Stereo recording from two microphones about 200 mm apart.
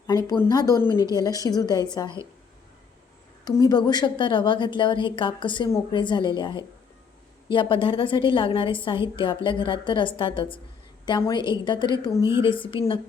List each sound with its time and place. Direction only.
0.1 s a woman's voice: 20° left (ahead or behind)
3.4 s a woman's voice: 20° left (ahead or behind)